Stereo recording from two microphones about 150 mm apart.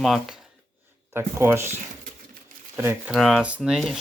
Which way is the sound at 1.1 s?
15° right (ahead or behind).